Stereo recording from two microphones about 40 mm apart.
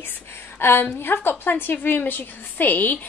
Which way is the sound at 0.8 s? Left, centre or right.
Left.